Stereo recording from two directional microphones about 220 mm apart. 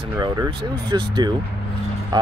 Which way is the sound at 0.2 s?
20° right (ahead or behind).